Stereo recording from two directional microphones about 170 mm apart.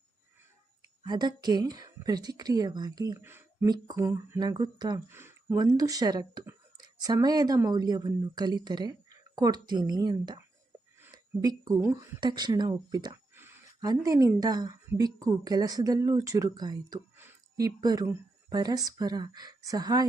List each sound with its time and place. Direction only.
1.0 s speech: 25° right (ahead or behind)
5.0 s speech: 15° right (ahead or behind)
11.4 s speech: 20° right (ahead or behind)